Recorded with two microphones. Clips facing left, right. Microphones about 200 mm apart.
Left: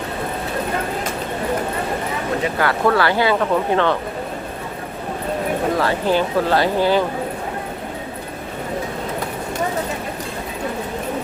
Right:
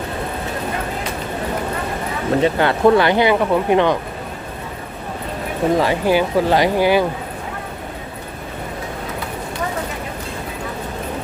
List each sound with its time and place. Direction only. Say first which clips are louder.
2.4 s speech: right 5 dB; 25° right (ahead or behind)
5.7 s speech: right 4 dB; 15° right (ahead or behind)